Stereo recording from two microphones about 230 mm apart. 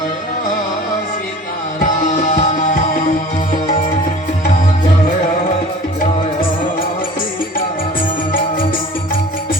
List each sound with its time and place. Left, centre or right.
2.1 s music: left